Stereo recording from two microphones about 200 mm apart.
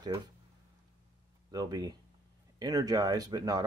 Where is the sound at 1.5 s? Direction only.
20° right (ahead or behind).